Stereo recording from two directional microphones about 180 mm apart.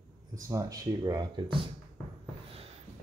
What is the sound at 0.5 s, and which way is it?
Speech, 20° right (ahead or behind).